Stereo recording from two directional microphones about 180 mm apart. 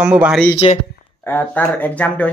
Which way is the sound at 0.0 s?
5° right (ahead or behind).